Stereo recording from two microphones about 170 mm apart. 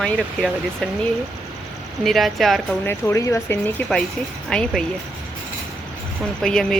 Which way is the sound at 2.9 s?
15° left (ahead or behind).